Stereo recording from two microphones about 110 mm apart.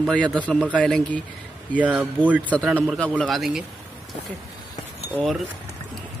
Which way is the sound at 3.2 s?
Centre (ahead or behind).